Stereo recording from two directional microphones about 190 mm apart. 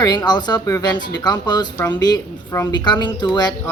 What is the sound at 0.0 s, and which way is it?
Speech, 20° left (ahead or behind).